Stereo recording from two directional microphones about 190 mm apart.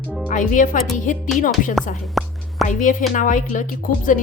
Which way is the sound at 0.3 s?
45° left (ahead or behind).